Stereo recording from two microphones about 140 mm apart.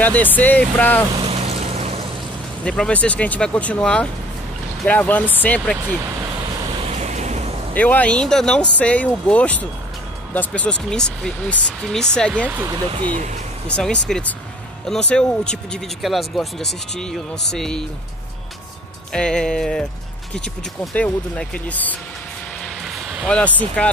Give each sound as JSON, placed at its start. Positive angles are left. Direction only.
{"t": 0.0, "sound": "speech", "side_deg": 10}
{"t": 1.1, "sound": "a sound", "side_deg": -45}
{"t": 2.6, "sound": "speech", "side_deg": 5}
{"t": 6.9, "sound": "vehicle", "side_deg": -55}
{"t": 7.7, "sound": "speech", "side_deg": 10}
{"t": 13.7, "sound": "speech", "side_deg": 5}
{"t": 19.1, "sound": "speech", "side_deg": 5}
{"t": 22.8, "sound": "vehicle", "side_deg": -5}
{"t": 23.2, "sound": "speech", "side_deg": 5}